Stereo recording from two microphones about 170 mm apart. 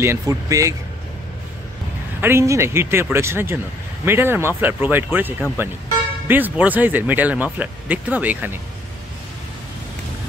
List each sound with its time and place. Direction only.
0.0 s speech: 15° right (ahead or behind)
2.2 s speech: 15° right (ahead or behind)